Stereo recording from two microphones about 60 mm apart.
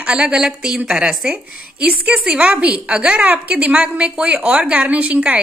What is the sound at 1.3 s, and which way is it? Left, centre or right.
A woman's voice, right.